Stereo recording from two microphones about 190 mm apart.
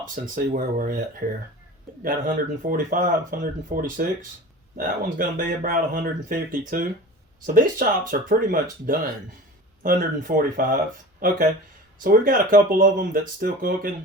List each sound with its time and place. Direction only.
0.1 s speech: 45° right (ahead or behind)
2.0 s speech: 45° right (ahead or behind)